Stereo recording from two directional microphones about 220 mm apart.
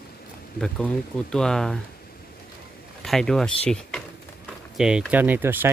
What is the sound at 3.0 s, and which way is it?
Speech, centre (ahead or behind).